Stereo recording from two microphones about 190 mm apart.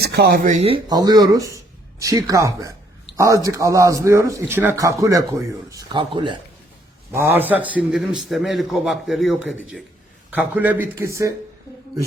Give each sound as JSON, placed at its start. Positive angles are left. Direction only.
{"t": 0.0, "sound": "speech", "side_deg": -55}
{"t": 0.9, "sound": "speech", "side_deg": -20}
{"t": 7.1, "sound": "a man's voice", "side_deg": -10}